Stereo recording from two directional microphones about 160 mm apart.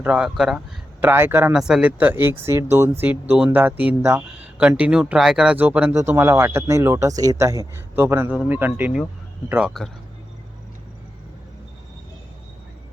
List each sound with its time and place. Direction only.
0.0 s speech: 5° right (ahead or behind)
1.5 s speech: 5° right (ahead or behind)